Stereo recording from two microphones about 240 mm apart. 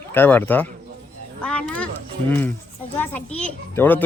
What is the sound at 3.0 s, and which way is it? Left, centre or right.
A child's voice, centre.